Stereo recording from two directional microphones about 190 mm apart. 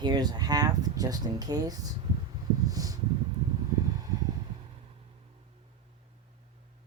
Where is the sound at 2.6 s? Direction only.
20° right (ahead or behind).